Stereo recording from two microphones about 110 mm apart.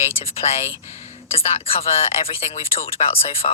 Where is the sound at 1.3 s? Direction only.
65° left (ahead or behind).